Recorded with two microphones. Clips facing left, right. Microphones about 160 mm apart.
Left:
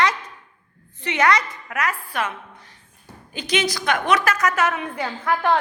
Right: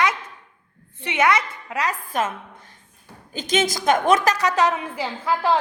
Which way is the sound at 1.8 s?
40° right (ahead or behind).